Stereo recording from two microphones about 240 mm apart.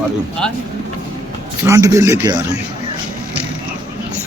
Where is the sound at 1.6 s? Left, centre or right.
Centre.